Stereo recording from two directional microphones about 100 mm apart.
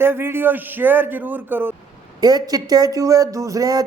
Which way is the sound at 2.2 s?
40° right (ahead or behind).